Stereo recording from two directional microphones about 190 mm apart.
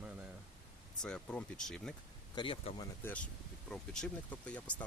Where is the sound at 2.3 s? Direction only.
25° left (ahead or behind).